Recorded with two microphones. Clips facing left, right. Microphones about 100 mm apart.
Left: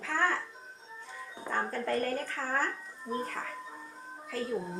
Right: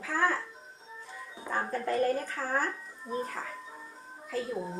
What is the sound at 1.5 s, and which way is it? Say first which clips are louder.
A woman's voice: right 1 dB; 10° right (ahead or behind).